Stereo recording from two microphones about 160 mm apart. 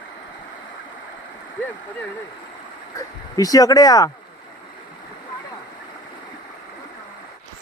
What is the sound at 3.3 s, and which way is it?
Speech, 20° left (ahead or behind).